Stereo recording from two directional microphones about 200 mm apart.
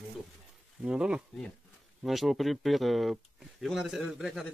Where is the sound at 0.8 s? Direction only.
5° right (ahead or behind).